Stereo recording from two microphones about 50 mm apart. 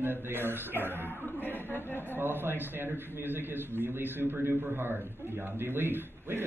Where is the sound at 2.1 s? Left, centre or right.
Right.